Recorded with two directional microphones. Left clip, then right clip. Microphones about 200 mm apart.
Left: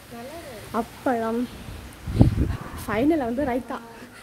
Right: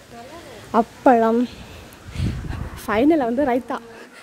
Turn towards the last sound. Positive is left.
turn(degrees=-45)  # may be behind; listen again after turning